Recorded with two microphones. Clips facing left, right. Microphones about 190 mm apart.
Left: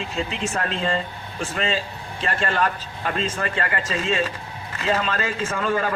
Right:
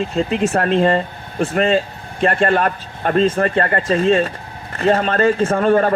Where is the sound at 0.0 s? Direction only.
50° right (ahead or behind).